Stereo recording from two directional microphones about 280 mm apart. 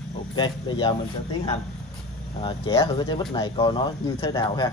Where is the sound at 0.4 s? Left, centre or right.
Centre.